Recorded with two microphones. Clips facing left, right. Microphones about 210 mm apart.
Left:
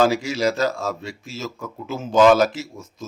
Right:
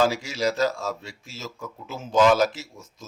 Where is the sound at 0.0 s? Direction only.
70° left (ahead or behind).